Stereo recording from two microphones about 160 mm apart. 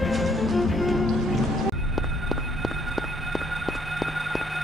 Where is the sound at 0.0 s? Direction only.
Centre (ahead or behind).